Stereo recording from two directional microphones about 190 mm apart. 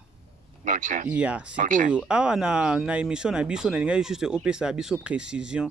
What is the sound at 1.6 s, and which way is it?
Speech, 45° right (ahead or behind).